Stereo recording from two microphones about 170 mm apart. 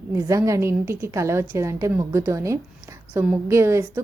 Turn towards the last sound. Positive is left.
turn(degrees=-15)  # may be behind; listen again after turning